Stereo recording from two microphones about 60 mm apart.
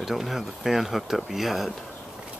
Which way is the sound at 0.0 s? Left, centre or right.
Centre.